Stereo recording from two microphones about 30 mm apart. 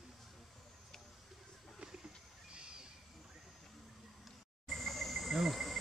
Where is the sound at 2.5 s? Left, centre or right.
Right.